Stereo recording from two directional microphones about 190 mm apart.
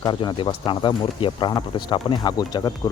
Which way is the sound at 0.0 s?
25° left (ahead or behind).